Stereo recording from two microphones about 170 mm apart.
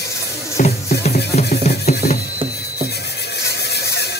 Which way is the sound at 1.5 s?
60° left (ahead or behind).